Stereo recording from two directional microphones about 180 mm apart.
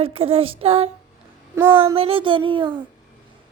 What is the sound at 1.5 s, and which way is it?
Speech, 10° right (ahead or behind).